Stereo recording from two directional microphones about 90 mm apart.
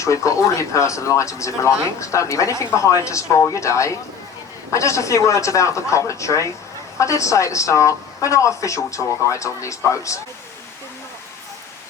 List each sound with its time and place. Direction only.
0.0 s speech: 35° left (ahead or behind)